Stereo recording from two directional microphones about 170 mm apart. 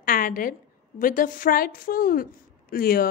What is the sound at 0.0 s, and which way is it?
A woman's voice, 55° left (ahead or behind).